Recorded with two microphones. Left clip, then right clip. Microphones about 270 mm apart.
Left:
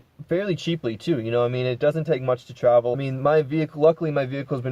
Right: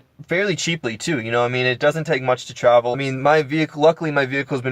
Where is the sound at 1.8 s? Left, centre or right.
Centre.